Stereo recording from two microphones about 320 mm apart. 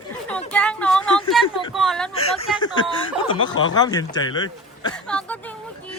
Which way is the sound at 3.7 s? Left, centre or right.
Centre.